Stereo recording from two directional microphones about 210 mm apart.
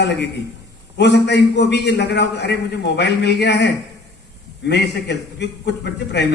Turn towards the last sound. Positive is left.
turn(degrees=55)  # may be behind; listen again after turning